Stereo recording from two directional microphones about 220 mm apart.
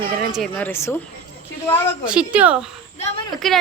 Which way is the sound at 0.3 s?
5° left (ahead or behind).